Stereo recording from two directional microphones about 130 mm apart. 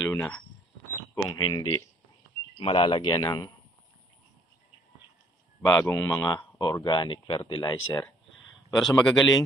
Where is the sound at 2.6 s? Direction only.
45° left (ahead or behind).